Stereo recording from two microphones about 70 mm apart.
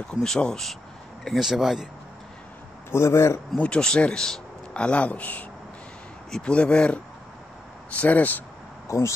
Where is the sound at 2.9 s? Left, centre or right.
Left.